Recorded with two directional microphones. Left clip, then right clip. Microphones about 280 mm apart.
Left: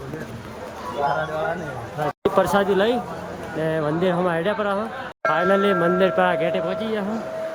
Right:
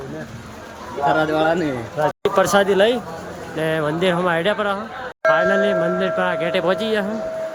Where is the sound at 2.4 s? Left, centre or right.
Centre.